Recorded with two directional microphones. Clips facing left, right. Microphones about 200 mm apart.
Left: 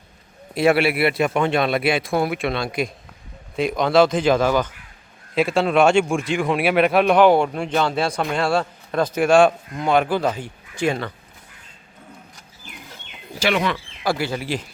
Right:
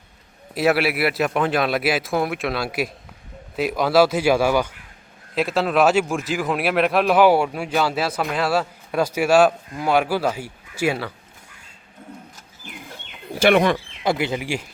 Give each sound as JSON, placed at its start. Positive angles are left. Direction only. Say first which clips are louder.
{"t": 0.5, "sound": "a man's voice", "louder": "left 2 dB", "side_deg": -5}
{"t": 5.3, "sound": "a man's voice", "louder": "left 2 dB", "side_deg": 0}
{"t": 13.4, "sound": "speech", "louder": "right 5 dB", "side_deg": -50}
{"t": 13.7, "sound": "speech", "louder": "right 1 dB", "side_deg": -20}